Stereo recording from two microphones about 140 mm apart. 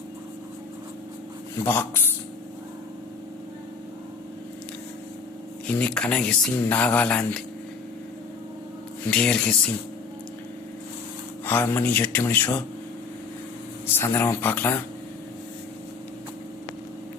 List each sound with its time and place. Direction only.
1.6 s speech: 15° left (ahead or behind)
5.6 s speech: 10° left (ahead or behind)
9.0 s speech: 10° left (ahead or behind)
11.4 s speech: 15° left (ahead or behind)
13.8 s speech: 15° left (ahead or behind)